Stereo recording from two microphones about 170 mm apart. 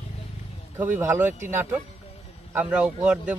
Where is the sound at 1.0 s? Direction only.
15° right (ahead or behind).